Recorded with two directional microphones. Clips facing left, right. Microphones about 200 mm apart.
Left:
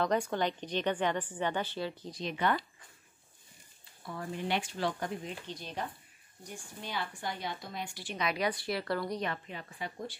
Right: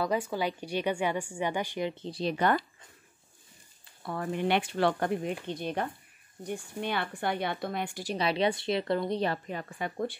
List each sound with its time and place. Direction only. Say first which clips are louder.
0.0 s a woman's voice: right 1 dB; 5° right (ahead or behind)
2.0 s speech: right 5 dB; 35° right (ahead or behind)
4.0 s speech: right 7 dB; 65° right (ahead or behind)
8.0 s speech: right 5 dB; 35° right (ahead or behind)
9.2 s a woman's voice: right 6 dB; 40° right (ahead or behind)